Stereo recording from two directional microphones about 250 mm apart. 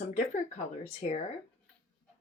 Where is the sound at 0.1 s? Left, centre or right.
Left.